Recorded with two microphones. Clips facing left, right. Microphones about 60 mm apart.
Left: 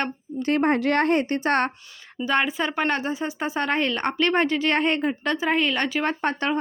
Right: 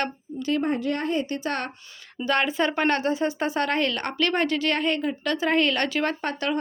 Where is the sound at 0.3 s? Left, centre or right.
Left.